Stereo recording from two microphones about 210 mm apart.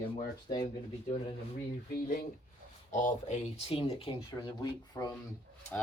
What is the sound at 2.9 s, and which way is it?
Speech, 35° left (ahead or behind).